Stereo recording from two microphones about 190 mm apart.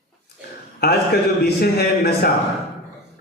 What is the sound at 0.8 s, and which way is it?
A man's voice, 60° left (ahead or behind).